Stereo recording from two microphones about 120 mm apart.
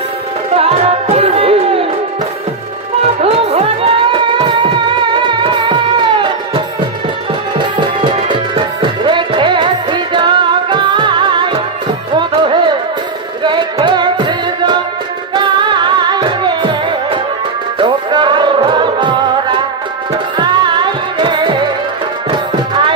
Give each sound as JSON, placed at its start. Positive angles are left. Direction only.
{"t": 0.5, "sound": "music", "side_deg": -55}
{"t": 3.0, "sound": "music", "side_deg": -60}
{"t": 7.6, "sound": "music", "side_deg": -40}
{"t": 13.8, "sound": "music", "side_deg": -40}
{"t": 20.4, "sound": "music", "side_deg": -40}